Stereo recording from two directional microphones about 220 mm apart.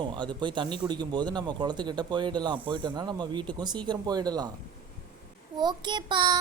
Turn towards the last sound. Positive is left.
turn(degrees=-20)  # may be behind; listen again after turning